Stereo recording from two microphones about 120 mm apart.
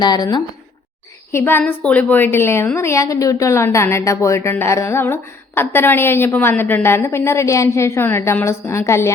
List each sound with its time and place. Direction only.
0.0 s speech: 35° left (ahead or behind)
1.3 s a woman's voice: 20° left (ahead or behind)